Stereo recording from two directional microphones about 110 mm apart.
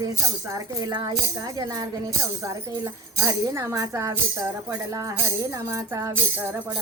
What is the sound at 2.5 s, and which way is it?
Speech, 30° right (ahead or behind).